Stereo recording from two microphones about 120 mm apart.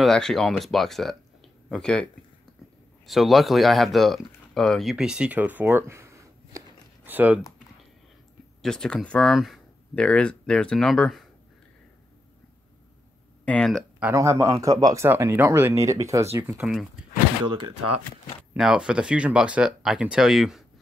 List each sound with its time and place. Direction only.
0.0 s speech: 5° left (ahead or behind)
3.1 s speech: centre (ahead or behind); by 6.6 s 25° right (ahead or behind)
7.1 s speech: 15° right (ahead or behind)
8.6 s speech: 5° left (ahead or behind)
13.5 s speech: 5° left (ahead or behind)
14.1 s speech: 25° right (ahead or behind)
15.0 s speech: 20° right (ahead or behind)
18.6 s speech: 5° right (ahead or behind)